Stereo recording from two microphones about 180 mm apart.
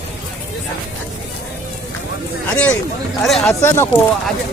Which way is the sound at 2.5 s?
5° left (ahead or behind).